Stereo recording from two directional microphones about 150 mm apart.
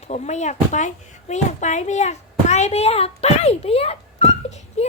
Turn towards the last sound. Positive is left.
turn(degrees=45)  # may be behind; listen again after turning